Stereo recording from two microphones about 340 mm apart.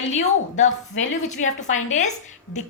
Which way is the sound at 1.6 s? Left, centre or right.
Left.